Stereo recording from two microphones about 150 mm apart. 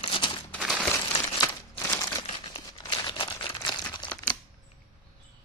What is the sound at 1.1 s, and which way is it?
Crumpling, 30° left (ahead or behind).